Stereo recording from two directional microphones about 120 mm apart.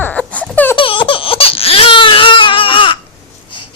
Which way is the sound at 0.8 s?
45° left (ahead or behind).